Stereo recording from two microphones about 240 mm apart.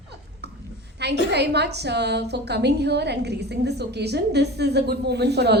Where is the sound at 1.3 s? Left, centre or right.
Right.